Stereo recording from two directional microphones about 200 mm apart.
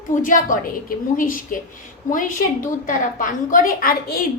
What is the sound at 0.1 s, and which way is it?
A woman's voice, 40° left (ahead or behind).